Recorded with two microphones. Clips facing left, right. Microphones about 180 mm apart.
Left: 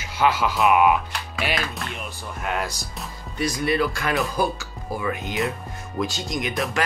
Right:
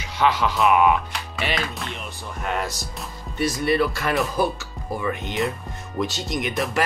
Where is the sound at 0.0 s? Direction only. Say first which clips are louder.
Even; 5° left (ahead or behind).